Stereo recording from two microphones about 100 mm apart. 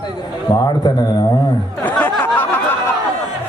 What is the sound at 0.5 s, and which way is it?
A man's voice, 40° left (ahead or behind).